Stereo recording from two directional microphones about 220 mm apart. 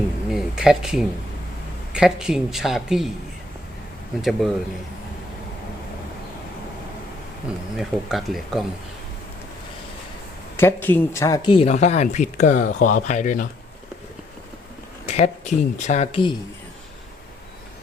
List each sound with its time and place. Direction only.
0.3 s speech: centre (ahead or behind)
4.2 s speech: centre (ahead or behind)
7.8 s speech: centre (ahead or behind)
10.6 s speech: 10° left (ahead or behind); by 13.5 s 35° left (ahead or behind)
15.0 s speech: 30° left (ahead or behind)